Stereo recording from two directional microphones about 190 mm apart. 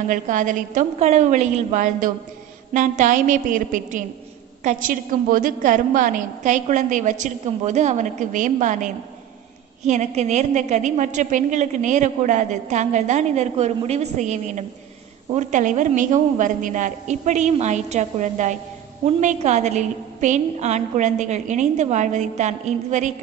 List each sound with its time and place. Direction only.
0.1 s a woman's voice: 40° right (ahead or behind)